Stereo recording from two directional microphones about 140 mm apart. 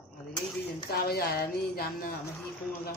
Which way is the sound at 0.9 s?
90° left.